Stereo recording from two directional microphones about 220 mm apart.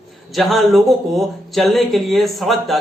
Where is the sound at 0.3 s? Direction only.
Centre (ahead or behind).